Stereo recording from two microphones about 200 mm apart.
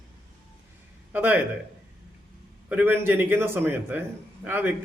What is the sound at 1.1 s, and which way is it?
Speech, 10° right (ahead or behind).